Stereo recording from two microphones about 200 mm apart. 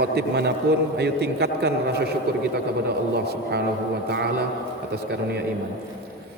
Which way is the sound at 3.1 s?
55° right (ahead or behind).